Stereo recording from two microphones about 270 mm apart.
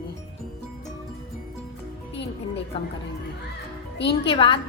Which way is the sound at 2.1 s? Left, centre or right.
Left.